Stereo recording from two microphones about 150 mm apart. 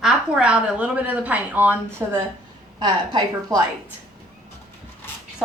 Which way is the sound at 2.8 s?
25° right (ahead or behind).